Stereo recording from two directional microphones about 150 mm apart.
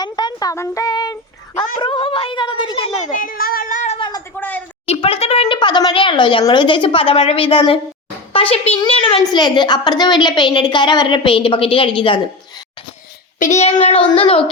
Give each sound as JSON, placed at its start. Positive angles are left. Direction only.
{"t": 0.0, "sound": "speech", "side_deg": 30}
{"t": 3.2, "sound": "speech", "side_deg": 75}
{"t": 4.4, "sound": "a woman's voice", "side_deg": 10}
{"t": 4.9, "sound": "a child's voice", "side_deg": 40}
{"t": 13.4, "sound": "speech", "side_deg": 50}